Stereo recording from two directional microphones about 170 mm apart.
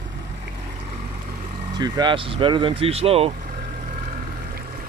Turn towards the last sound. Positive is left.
turn(degrees=-35)  # may be behind; listen again after turning